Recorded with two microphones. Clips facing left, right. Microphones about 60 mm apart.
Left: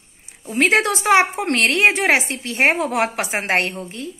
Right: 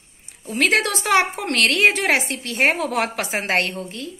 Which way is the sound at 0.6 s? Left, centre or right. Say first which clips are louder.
Left 2 dB; left.